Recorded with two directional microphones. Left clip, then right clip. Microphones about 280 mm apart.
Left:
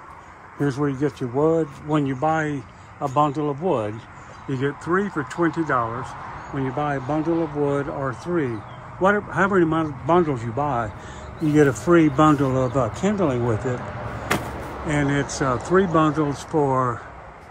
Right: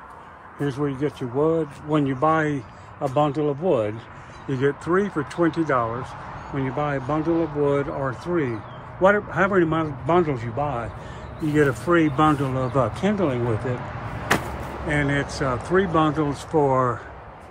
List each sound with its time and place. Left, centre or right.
0.7 s speech: centre
9.0 s a man's voice: centre
13.7 s speech: left
14.9 s speech: centre